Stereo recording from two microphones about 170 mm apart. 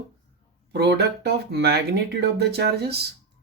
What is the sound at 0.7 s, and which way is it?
Speech, 75° right (ahead or behind).